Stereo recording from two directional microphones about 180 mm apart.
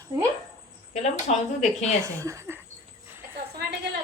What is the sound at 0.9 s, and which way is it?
Speech, 40° left (ahead or behind).